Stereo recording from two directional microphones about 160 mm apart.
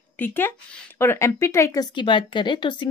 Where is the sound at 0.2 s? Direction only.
15° left (ahead or behind).